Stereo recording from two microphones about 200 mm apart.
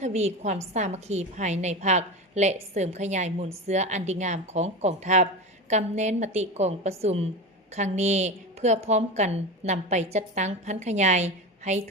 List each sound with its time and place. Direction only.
0.0 s a woman's voice: 35° right (ahead or behind)